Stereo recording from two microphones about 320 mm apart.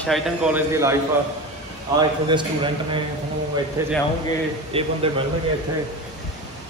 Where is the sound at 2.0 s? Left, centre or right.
Centre.